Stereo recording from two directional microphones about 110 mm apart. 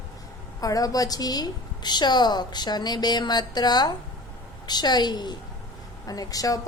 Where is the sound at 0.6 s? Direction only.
35° left (ahead or behind).